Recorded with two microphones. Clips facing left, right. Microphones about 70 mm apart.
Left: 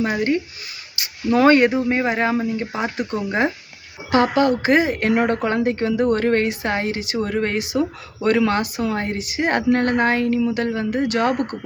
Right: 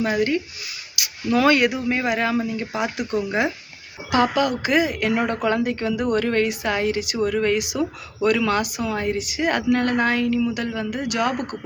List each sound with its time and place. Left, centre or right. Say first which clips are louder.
0.0 s a woman's voice: left 1 dB; left